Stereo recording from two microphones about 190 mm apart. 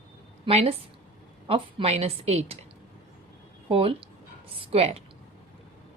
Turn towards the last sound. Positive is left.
turn(degrees=-30)  # may be behind; listen again after turning